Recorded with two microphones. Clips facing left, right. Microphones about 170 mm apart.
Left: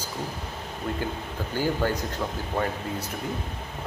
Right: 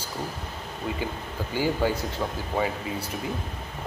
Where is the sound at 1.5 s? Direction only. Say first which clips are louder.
Right 1 dB; 10° right (ahead or behind).